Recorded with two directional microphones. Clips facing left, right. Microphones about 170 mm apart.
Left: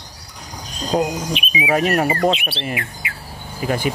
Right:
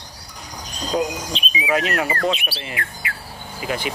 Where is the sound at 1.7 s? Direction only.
45° left (ahead or behind).